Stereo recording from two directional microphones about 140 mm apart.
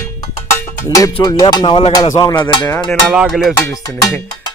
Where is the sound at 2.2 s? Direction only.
35° left (ahead or behind).